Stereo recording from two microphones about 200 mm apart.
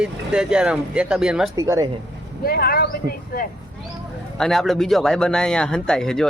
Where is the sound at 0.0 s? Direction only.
5° right (ahead or behind).